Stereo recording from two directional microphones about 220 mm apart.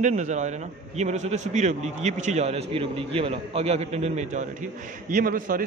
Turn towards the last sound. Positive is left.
turn(degrees=-40)  # may be behind; listen again after turning